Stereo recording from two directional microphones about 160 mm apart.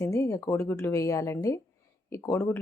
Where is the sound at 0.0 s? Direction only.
20° left (ahead or behind).